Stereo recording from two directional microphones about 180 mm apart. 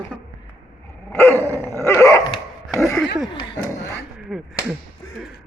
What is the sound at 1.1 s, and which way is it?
Dog, 15° left (ahead or behind).